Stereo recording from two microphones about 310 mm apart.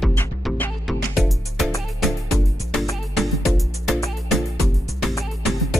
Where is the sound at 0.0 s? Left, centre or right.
Centre.